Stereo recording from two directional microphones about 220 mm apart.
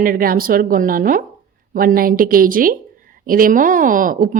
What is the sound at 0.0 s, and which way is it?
A woman's voice, 40° right (ahead or behind).